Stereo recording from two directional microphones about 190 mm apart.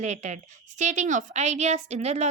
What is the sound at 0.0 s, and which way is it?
A woman's voice, 40° right (ahead or behind).